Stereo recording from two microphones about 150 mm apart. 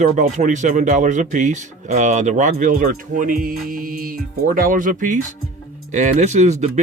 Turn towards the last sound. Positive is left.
turn(degrees=-50)  # may be behind; listen again after turning